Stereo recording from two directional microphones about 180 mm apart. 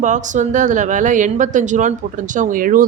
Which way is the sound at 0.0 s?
45° right (ahead or behind).